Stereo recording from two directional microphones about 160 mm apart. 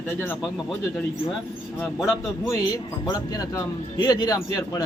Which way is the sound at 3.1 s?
20° left (ahead or behind).